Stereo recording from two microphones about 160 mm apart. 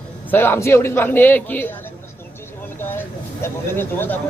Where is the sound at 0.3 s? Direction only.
10° left (ahead or behind).